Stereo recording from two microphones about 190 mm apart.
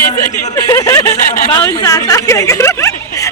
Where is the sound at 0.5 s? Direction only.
15° left (ahead or behind).